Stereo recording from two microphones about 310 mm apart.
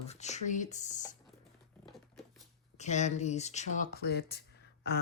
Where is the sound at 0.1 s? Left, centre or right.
Left.